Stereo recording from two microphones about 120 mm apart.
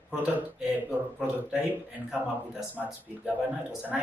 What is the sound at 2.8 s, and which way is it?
Speech, 5° right (ahead or behind).